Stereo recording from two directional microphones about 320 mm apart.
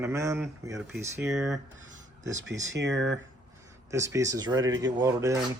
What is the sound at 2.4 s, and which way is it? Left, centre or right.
Speech, right.